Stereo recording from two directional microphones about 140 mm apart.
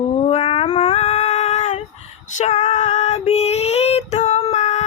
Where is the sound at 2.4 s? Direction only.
55° left (ahead or behind).